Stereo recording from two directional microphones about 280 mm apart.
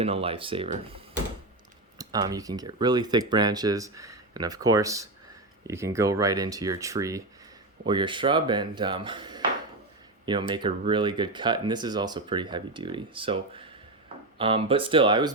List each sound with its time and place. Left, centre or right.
0.0 s speech: right
2.0 s speech: centre